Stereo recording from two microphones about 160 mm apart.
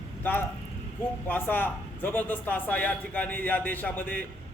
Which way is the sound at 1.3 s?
10° left (ahead or behind).